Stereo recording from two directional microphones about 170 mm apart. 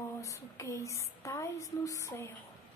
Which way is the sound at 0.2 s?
20° left (ahead or behind).